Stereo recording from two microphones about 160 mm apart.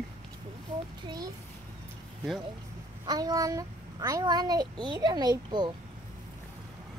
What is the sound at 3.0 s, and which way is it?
A child's voice, 25° right (ahead or behind).